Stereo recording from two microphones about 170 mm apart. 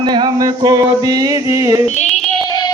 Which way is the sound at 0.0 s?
25° right (ahead or behind).